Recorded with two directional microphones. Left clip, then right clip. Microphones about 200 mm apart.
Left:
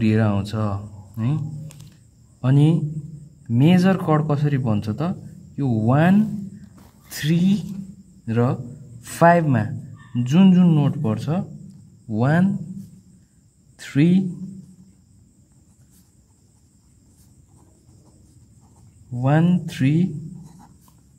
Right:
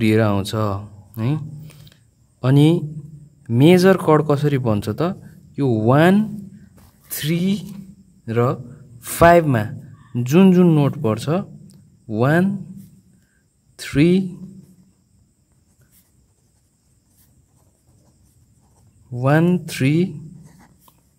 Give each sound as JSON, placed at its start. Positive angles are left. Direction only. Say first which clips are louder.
{"t": 0.0, "sound": "speech", "louder": "right 5 dB", "side_deg": -45}
{"t": 2.4, "sound": "a man's voice", "louder": "right 5 dB", "side_deg": -45}
{"t": 13.7, "sound": "speech", "louder": "right 4 dB", "side_deg": -40}
{"t": 19.1, "sound": "a man's voice", "louder": "right 4 dB", "side_deg": -40}
{"t": 20.4, "sound": "a sound", "louder": "left 2 dB", "side_deg": -20}